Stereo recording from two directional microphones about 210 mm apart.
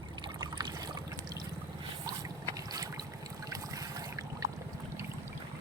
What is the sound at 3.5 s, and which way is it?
Boat, 15° right (ahead or behind).